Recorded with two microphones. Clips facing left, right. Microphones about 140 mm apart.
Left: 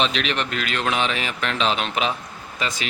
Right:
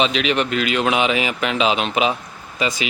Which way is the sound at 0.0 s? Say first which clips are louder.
Right 4 dB; 5° right (ahead or behind).